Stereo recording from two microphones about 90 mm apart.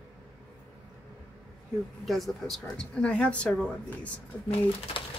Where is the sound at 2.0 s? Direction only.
Centre (ahead or behind).